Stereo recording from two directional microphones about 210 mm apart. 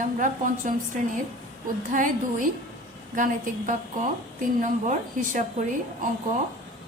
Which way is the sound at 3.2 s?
35° right (ahead or behind).